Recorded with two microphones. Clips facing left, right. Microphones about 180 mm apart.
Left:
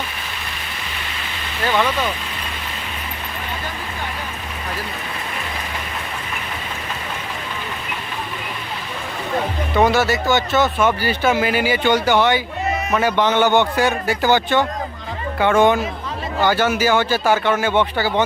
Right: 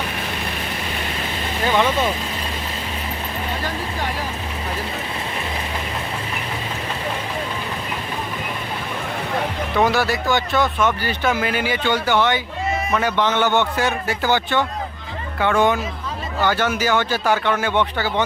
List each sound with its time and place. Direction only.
1.8 s speech: 25° right (ahead or behind)
9.7 s speech: centre (ahead or behind)
11.9 s speech: 15° left (ahead or behind)
16.4 s speech: 5° left (ahead or behind)